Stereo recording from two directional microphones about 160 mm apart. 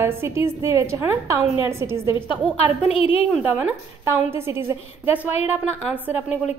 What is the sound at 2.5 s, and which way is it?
Speech, 35° left (ahead or behind).